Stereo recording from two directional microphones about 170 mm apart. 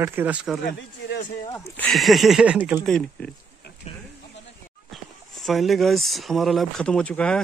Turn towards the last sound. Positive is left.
turn(degrees=5)  # may be behind; listen again after turning